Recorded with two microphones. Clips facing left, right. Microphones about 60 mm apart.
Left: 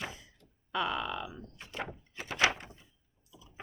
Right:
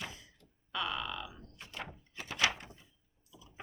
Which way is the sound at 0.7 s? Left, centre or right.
Left.